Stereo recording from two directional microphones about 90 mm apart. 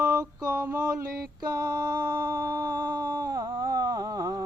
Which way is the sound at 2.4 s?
30° right (ahead or behind).